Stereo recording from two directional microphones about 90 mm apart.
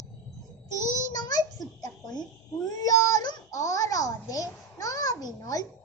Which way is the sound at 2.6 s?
40° left (ahead or behind).